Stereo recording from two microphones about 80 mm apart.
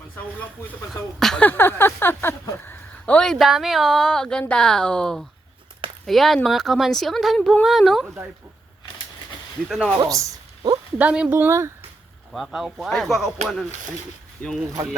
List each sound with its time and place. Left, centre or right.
1.4 s speech: left
3.2 s speech: centre
8.0 s speech: right
9.6 s speech: centre
10.0 s speech: right
10.9 s speech: centre
11.3 s speech: right
12.3 s speech: centre
14.4 s speech: centre